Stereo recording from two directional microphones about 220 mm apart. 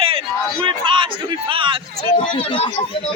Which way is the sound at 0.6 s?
20° right (ahead or behind).